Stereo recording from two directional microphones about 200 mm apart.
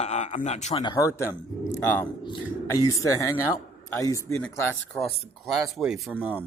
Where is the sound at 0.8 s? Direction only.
20° left (ahead or behind); by 6.4 s 10° right (ahead or behind).